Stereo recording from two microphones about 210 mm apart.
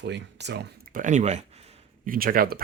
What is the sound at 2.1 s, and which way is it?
Speech, 45° right (ahead or behind).